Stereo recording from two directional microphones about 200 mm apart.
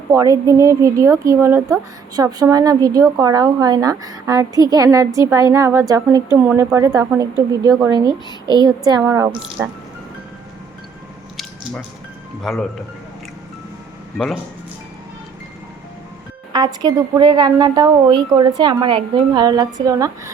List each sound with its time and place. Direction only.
0.1 s a woman's voice: 15° right (ahead or behind)
12.4 s speech: centre (ahead or behind)
16.5 s a woman's voice: 20° right (ahead or behind)